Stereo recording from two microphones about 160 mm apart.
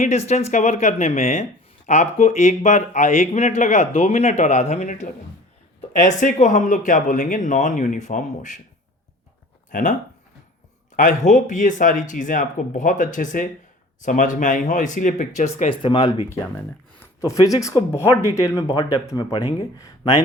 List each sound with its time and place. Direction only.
0.0 s speech: 45° left (ahead or behind)
9.7 s speech: 50° left (ahead or behind)
10.9 s speech: 55° left (ahead or behind)
15.7 s speech: 30° left (ahead or behind)
17.0 s speech: 20° left (ahead or behind)